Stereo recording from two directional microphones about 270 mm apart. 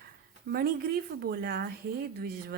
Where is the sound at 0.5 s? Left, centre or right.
Right.